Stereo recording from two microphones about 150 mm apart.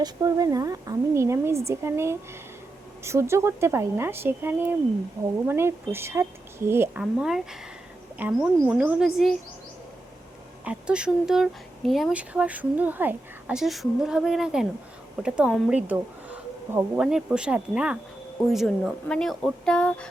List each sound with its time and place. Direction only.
0.0 s a woman's voice: 25° right (ahead or behind)
7.0 s a woman's voice: 5° right (ahead or behind)
10.7 s a woman's voice: 5° right (ahead or behind)